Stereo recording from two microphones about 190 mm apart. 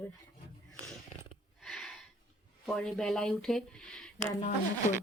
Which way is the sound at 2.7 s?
Centre (ahead or behind).